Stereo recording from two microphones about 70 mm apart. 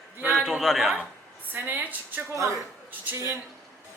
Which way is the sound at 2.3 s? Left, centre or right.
Right.